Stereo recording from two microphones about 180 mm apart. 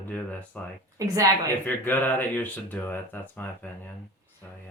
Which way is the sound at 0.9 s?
20° right (ahead or behind).